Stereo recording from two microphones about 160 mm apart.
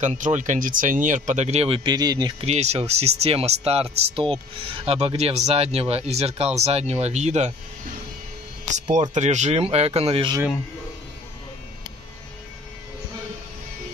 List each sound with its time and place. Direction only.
0.0 s speech: 50° right (ahead or behind); by 2.3 s 25° right (ahead or behind)
2.4 s speech: 40° right (ahead or behind)
8.6 s speech: 50° right (ahead or behind)